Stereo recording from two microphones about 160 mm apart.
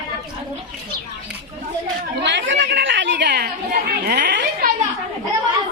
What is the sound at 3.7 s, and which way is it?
Chatter, 80° right.